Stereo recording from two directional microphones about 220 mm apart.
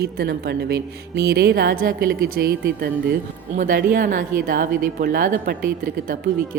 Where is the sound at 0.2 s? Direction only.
45° right (ahead or behind).